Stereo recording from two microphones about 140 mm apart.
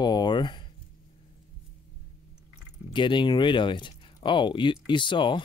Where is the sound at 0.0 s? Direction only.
30° left (ahead or behind).